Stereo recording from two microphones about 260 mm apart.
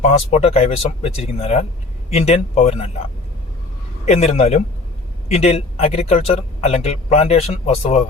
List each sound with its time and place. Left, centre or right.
0.0 s speech: left
4.0 s speech: left